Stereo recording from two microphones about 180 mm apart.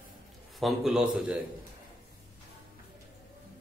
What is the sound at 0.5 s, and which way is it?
Speech, centre (ahead or behind).